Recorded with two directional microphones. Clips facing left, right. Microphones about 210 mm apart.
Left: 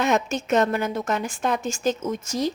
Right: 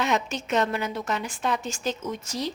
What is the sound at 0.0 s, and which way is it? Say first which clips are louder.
A woman's voice: left 4 dB; 45° left (ahead or behind).